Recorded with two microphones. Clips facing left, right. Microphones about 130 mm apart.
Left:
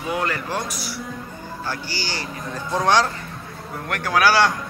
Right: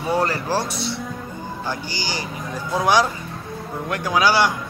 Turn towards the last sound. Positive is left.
turn(degrees=-15)  # may be behind; listen again after turning